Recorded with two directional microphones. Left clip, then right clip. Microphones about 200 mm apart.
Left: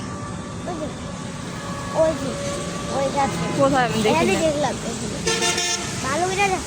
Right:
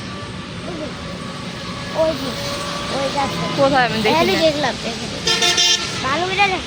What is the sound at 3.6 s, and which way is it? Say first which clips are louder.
Speech: right 4 dB; 10° left (ahead or behind).